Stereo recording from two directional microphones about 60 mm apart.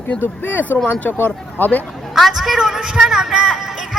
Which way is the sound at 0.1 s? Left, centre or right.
Left.